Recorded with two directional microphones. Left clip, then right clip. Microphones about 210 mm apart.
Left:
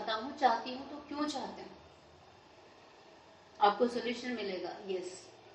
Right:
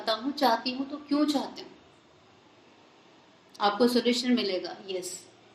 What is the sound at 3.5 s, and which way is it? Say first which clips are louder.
A woman's voice: right 4 dB; 45° right (ahead or behind).